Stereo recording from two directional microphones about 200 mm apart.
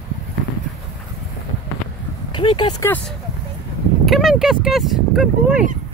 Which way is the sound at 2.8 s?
10° left (ahead or behind).